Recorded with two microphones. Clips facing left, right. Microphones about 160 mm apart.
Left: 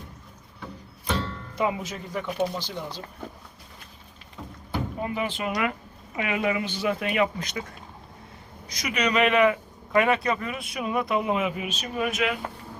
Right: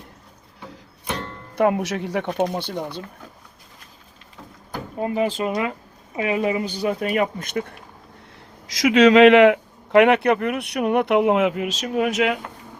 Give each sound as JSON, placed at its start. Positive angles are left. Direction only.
{"t": 1.2, "sound": "speech", "side_deg": -60}
{"t": 4.9, "sound": "speech", "side_deg": -35}
{"t": 8.6, "sound": "speech", "side_deg": -90}